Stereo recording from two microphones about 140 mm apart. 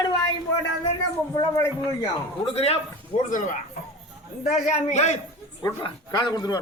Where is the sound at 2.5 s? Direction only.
45° left (ahead or behind).